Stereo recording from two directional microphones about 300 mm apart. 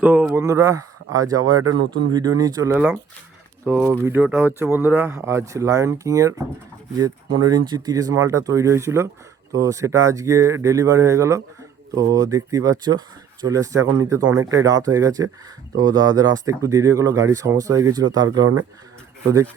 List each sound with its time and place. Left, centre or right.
0.0 s speech: centre
1.4 s speech: right
2.1 s speech: centre
7.7 s speech: centre